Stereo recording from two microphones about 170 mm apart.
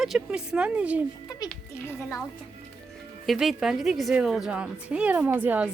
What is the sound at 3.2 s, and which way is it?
A woman's voice, centre (ahead or behind).